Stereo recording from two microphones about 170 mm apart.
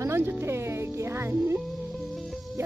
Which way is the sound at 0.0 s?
15° right (ahead or behind).